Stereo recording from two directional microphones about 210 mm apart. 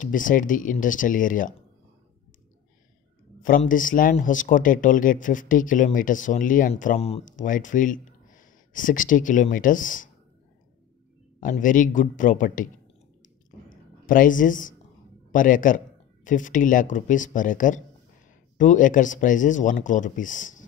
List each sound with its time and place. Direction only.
0.0 s speech: 40° left (ahead or behind)
3.4 s speech: 40° left (ahead or behind)
11.3 s speech: 40° left (ahead or behind)
13.7 s a sound: 40° left (ahead or behind)
15.3 s speech: 40° left (ahead or behind)